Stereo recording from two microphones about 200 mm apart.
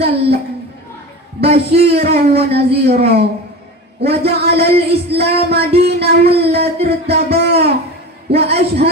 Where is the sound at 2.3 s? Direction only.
30° right (ahead or behind).